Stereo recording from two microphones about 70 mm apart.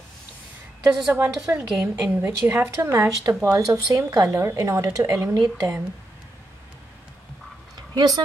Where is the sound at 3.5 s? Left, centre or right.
Right.